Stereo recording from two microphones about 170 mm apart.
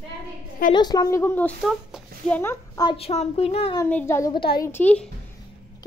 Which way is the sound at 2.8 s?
30° left (ahead or behind).